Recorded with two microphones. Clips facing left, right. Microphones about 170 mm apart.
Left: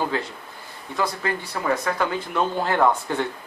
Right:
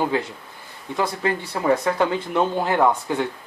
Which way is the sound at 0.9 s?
25° right (ahead or behind).